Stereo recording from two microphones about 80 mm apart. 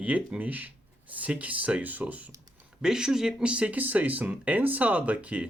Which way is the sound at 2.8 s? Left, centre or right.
Centre.